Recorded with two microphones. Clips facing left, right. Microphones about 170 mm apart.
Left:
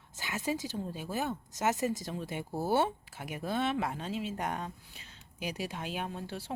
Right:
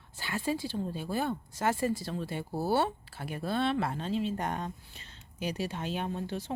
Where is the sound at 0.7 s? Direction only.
Centre (ahead or behind).